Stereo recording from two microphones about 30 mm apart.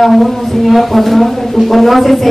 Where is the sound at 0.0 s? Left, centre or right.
Centre.